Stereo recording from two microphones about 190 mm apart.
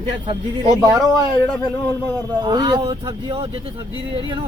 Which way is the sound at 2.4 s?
25° right (ahead or behind).